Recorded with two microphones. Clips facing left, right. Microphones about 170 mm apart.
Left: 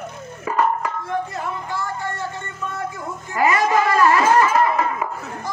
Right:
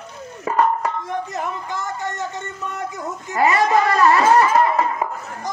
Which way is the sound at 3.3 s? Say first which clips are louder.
Right 1 dB; 35° right (ahead or behind).